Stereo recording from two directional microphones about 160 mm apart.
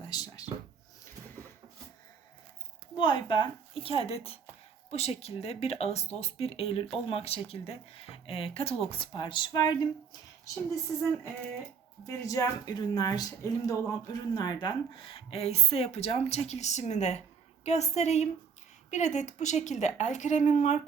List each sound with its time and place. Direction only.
0.1 s speech: 25° left (ahead or behind)
2.9 s speech: 30° left (ahead or behind)
12.0 s a woman's voice: 20° left (ahead or behind); by 20.7 s 50° left (ahead or behind)